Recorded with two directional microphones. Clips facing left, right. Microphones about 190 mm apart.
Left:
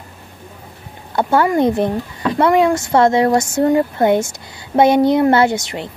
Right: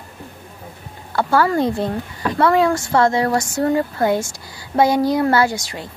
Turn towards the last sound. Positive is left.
turn(degrees=20)  # may be behind; listen again after turning